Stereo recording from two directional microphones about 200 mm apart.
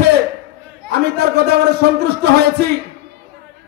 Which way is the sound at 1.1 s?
55° right (ahead or behind).